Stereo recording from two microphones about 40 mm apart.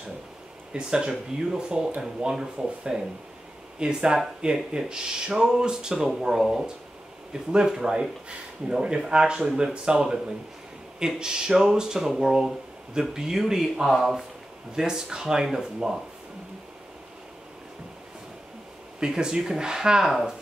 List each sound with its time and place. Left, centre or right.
0.7 s speech: right
7.6 s speech: centre
13.8 s speech: centre
14.8 s speech: centre
18.9 s speech: centre
20.1 s speech: centre